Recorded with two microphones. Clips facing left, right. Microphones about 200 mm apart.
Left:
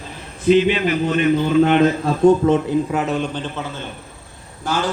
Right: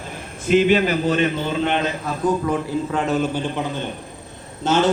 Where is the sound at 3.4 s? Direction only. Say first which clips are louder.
Right 3 dB; 15° right (ahead or behind).